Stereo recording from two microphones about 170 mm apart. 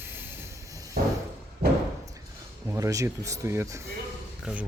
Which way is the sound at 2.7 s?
20° right (ahead or behind).